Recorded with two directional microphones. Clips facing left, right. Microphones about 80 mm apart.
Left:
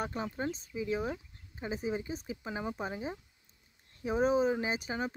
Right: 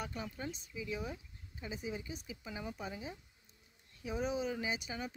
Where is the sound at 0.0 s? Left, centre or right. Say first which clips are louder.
Left 7 dB; left.